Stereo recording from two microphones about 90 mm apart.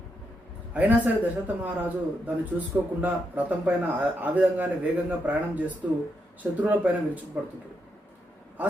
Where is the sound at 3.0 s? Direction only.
20° right (ahead or behind).